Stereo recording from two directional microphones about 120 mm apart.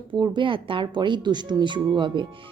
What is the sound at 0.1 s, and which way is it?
Speech, 40° right (ahead or behind).